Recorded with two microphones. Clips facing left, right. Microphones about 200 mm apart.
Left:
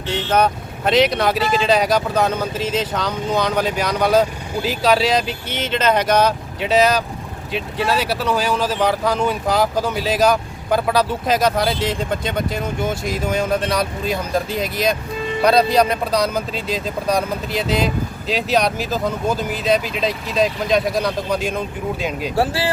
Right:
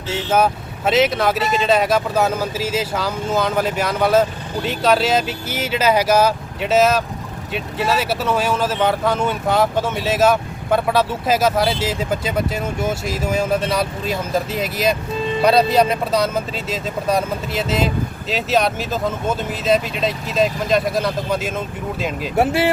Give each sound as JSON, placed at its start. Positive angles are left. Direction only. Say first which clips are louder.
{"t": 0.1, "sound": "speech", "louder": "even", "side_deg": -5}
{"t": 22.4, "sound": "speech", "louder": "right 4 dB", "side_deg": -20}